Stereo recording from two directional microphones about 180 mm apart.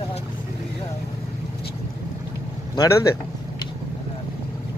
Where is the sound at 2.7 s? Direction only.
15° left (ahead or behind).